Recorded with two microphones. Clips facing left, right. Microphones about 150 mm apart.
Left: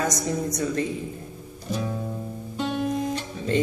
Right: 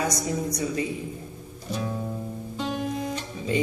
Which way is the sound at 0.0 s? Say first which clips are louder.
Left 1 dB; 45° left (ahead or behind).